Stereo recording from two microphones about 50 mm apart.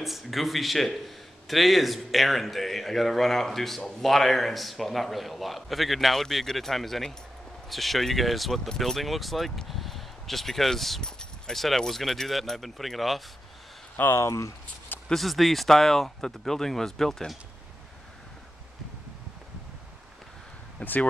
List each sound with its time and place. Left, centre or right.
0.0 s a man's voice: centre
14.1 s speech: left
15.0 s speech: centre
20.8 s speech: left